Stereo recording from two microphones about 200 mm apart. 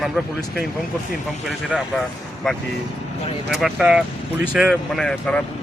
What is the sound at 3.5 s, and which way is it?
Speech, 5° right (ahead or behind).